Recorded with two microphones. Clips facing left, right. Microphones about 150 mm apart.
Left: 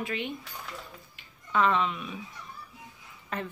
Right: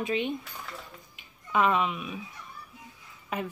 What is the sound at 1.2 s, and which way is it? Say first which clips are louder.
Music: right 1 dB; 10° right (ahead or behind).